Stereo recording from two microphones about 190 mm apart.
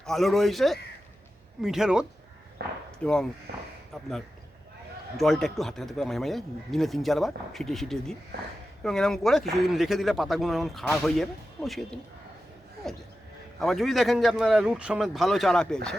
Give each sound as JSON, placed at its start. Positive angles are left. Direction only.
{"t": 0.0, "sound": "speech", "side_deg": 0}
{"t": 2.6, "sound": "a sound", "side_deg": -60}
{"t": 3.0, "sound": "speech", "side_deg": 5}
{"t": 5.1, "sound": "speech", "side_deg": 0}
{"t": 13.6, "sound": "speech", "side_deg": 0}